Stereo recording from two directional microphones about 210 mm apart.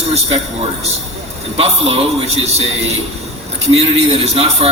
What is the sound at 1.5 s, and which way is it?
A man's voice, 30° right (ahead or behind).